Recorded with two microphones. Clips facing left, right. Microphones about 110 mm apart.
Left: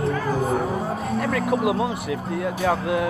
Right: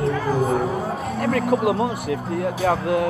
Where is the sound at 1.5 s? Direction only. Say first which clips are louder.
Right 2 dB; centre (ahead or behind).